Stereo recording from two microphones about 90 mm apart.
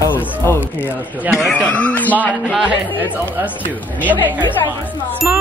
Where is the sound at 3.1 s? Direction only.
15° right (ahead or behind).